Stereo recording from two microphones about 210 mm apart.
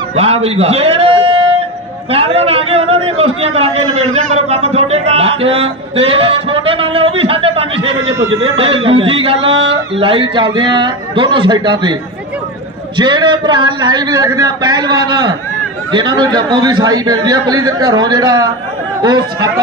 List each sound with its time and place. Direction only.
0.1 s a man's voice: 30° right (ahead or behind)
8.2 s a man's voice: 70° right (ahead or behind)
8.5 s speech: 25° right (ahead or behind)
9.5 s speech: 60° right (ahead or behind)
9.9 s speech: 25° right (ahead or behind)
12.9 s speech: 20° right (ahead or behind)